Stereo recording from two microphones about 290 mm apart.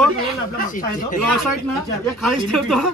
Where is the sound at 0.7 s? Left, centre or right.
Left.